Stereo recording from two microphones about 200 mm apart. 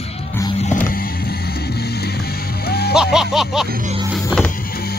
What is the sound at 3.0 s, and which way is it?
Speech, centre (ahead or behind).